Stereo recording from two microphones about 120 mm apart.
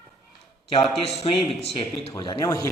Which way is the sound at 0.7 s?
50° left (ahead or behind).